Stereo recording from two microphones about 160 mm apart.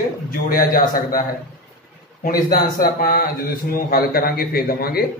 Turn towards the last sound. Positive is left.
turn(degrees=70)  # may be behind; listen again after turning